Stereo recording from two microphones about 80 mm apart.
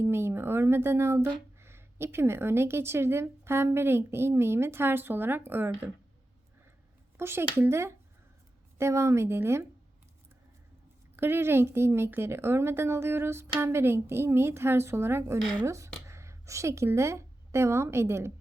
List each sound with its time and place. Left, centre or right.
0.0 s a woman's voice: right
7.2 s a woman's voice: right
11.2 s a woman's voice: right